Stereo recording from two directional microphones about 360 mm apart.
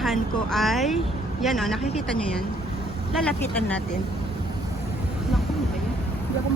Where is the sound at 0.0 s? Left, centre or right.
Centre.